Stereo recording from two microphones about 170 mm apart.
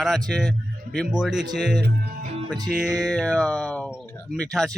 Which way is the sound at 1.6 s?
80° right.